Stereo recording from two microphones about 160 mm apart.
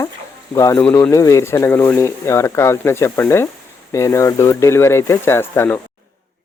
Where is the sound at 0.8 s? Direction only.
5° left (ahead or behind).